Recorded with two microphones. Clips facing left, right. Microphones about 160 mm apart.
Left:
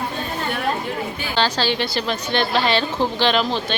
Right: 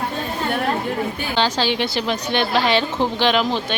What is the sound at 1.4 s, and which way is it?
A woman's voice, 20° right (ahead or behind).